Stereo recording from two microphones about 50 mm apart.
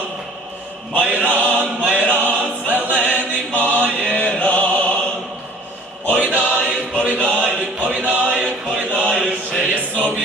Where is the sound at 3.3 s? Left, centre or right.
Left.